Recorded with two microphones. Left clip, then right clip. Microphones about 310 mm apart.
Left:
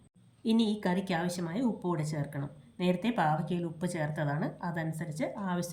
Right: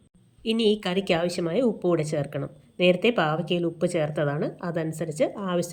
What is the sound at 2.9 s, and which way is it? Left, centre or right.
A woman's voice, left.